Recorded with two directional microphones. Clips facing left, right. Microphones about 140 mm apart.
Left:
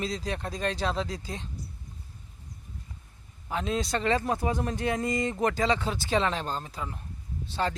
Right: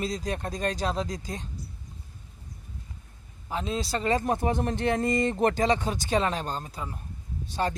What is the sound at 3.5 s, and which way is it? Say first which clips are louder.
Speech: left 1 dB; 35° right (ahead or behind).